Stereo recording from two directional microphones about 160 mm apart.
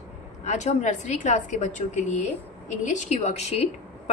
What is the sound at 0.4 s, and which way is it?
Speech, 45° left (ahead or behind).